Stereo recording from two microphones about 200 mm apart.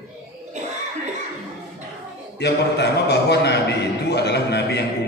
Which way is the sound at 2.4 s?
55° left (ahead or behind).